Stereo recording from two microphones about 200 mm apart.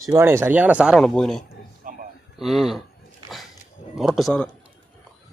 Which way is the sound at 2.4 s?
Centre (ahead or behind).